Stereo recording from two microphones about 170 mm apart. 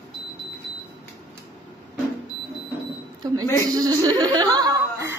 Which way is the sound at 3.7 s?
20° right (ahead or behind).